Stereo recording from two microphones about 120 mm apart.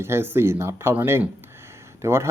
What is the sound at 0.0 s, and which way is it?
Speech, 20° right (ahead or behind).